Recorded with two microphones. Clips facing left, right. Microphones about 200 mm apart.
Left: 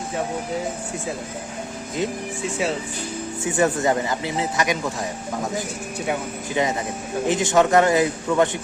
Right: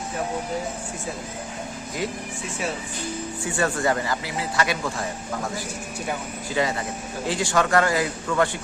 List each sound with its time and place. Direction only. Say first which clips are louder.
3.4 s speech: left 4 dB; 20° left (ahead or behind)
6.5 s speech: left 2 dB; 20° left (ahead or behind)